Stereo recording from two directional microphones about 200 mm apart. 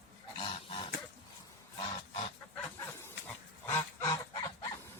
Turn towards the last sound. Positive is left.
turn(degrees=20)  # may be behind; listen again after turning